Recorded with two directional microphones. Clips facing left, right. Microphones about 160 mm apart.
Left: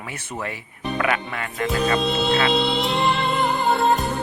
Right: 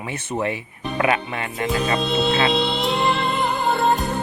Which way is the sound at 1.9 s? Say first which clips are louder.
Even; centre (ahead or behind).